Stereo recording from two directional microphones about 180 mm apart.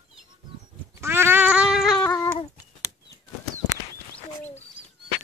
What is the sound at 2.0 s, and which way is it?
Cat, 20° left (ahead or behind).